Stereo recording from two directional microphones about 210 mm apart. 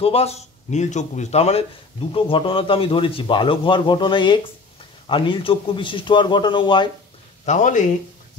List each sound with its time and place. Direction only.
0.0 s a man's voice: 30° left (ahead or behind)
7.4 s a man's voice: 35° left (ahead or behind)